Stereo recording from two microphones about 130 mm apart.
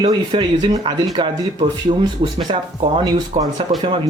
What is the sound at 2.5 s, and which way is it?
Speech, 50° right (ahead or behind).